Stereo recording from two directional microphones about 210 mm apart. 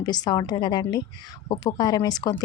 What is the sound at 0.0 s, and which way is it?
A woman's voice, 20° left (ahead or behind).